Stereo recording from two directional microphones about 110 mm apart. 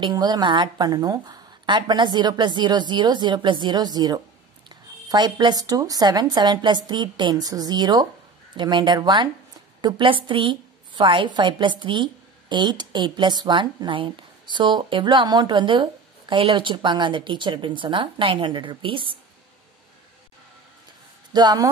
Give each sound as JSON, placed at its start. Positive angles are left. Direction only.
{"t": 0.0, "sound": "a woman's voice", "side_deg": -40}
{"t": 21.3, "sound": "speech", "side_deg": -40}